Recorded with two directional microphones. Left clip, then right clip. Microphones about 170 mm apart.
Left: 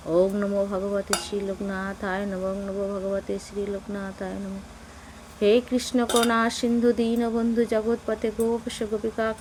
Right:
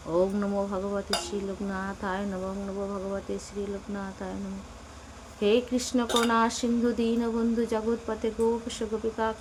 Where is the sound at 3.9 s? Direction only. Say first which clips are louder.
Left 4 dB; 25° left (ahead or behind).